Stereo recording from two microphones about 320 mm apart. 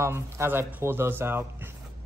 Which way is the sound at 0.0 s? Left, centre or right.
Centre.